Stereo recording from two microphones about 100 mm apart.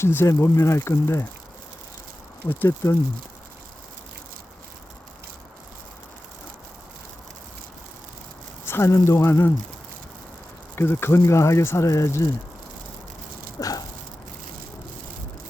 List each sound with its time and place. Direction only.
0.0 s speech: 25° left (ahead or behind)
2.5 s speech: 25° left (ahead or behind)
8.6 s speech: 25° left (ahead or behind)
10.8 s speech: 25° left (ahead or behind)
13.6 s a sound: 35° left (ahead or behind)